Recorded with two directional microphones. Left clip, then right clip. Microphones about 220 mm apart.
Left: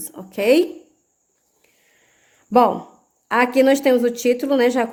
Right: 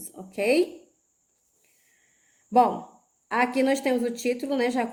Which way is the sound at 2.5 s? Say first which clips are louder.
Left 5 dB; 50° left (ahead or behind).